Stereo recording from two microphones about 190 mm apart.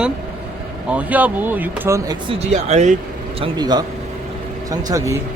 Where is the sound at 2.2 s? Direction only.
35° right (ahead or behind).